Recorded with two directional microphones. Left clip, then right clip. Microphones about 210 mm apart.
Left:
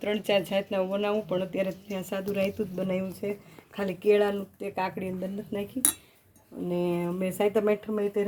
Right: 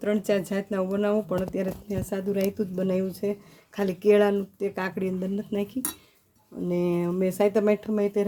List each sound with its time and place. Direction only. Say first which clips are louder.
0.0 s speech: right 1 dB; 40° right (ahead or behind)
4.7 s speech: right 1 dB; 40° right (ahead or behind)
6.7 s speech: right 3 dB; 30° right (ahead or behind)